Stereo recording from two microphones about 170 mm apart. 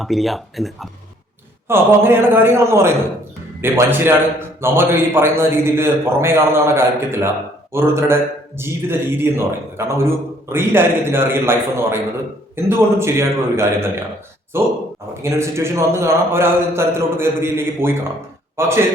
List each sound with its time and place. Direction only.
0.0 s speech: centre (ahead or behind)
1.6 s a man's voice: 15° right (ahead or behind)